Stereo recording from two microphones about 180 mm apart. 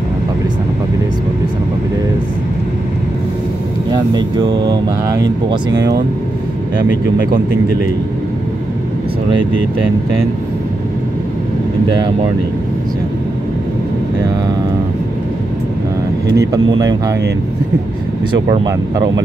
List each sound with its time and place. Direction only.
3.9 s speech: 25° right (ahead or behind)
16.3 s speech: 20° right (ahead or behind)
18.7 s speech: 20° right (ahead or behind)